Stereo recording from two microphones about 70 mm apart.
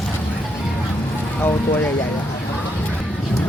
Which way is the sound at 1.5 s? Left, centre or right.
Left.